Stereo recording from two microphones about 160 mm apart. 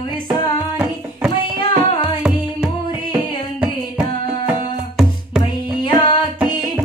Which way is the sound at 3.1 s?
10° right (ahead or behind).